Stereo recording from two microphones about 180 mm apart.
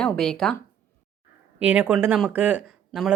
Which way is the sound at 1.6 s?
5° right (ahead or behind).